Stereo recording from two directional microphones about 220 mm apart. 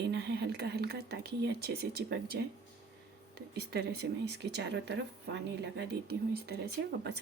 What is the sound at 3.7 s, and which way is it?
Speech, 50° right (ahead or behind).